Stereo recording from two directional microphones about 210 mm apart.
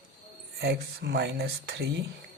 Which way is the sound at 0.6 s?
50° right (ahead or behind).